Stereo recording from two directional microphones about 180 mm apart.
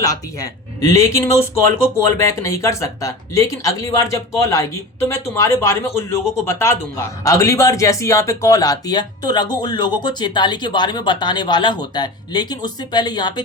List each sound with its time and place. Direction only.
0.0 s speech: 20° left (ahead or behind)